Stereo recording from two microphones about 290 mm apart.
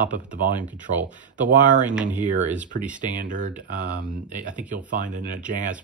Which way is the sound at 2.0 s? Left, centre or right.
Right.